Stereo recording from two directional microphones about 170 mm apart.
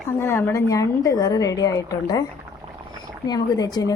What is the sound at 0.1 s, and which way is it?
A woman's voice, 15° left (ahead or behind).